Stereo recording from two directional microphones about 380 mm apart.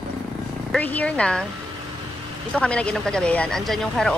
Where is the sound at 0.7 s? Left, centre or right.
Centre.